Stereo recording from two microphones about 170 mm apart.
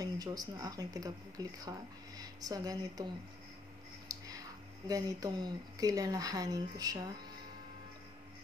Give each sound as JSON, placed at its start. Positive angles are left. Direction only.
{"t": 0.0, "sound": "speech", "side_deg": -20}
{"t": 4.1, "sound": "a sound", "side_deg": -20}
{"t": 4.8, "sound": "speech", "side_deg": -20}